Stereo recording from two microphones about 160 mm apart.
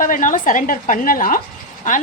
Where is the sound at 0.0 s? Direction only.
55° left (ahead or behind).